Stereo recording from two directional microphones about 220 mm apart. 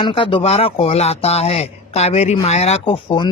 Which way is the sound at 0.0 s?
25° left (ahead or behind).